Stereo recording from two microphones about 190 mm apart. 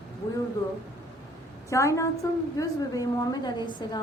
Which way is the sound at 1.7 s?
15° left (ahead or behind).